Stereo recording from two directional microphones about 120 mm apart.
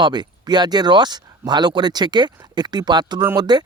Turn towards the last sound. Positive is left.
turn(degrees=-35)  # may be behind; listen again after turning